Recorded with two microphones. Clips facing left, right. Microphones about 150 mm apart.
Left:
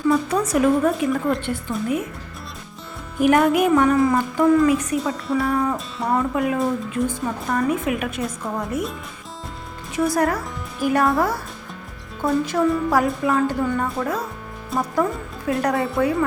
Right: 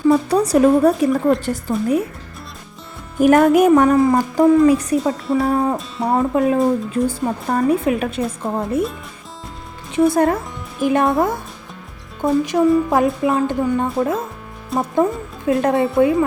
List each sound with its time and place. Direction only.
0.1 s speech: 35° right (ahead or behind)
3.2 s a woman's voice: 45° right (ahead or behind)
9.9 s speech: 25° right (ahead or behind)
12.2 s a woman's voice: 20° right (ahead or behind)
14.7 s speech: centre (ahead or behind)
15.4 s a woman's voice: 25° right (ahead or behind)